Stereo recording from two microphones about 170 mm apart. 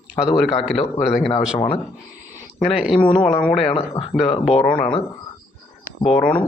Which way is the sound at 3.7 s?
30° left (ahead or behind).